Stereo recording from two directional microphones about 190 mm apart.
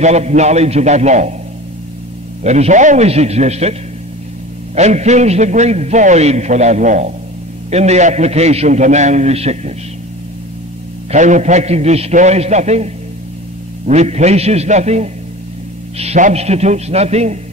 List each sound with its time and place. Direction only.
0.0 s a man's voice: 35° right (ahead or behind)
2.4 s a man's voice: 35° right (ahead or behind)
4.7 s a man's voice: 35° right (ahead or behind)
11.1 s a man's voice: 40° right (ahead or behind)